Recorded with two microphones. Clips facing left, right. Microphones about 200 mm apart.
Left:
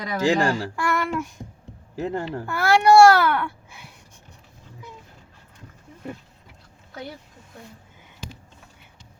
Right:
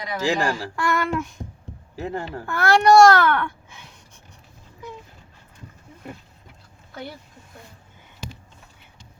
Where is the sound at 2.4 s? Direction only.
10° left (ahead or behind).